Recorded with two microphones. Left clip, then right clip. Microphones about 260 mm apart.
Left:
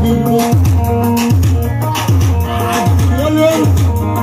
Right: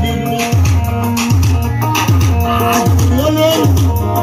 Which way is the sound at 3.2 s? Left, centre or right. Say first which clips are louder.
Left 1 dB; right.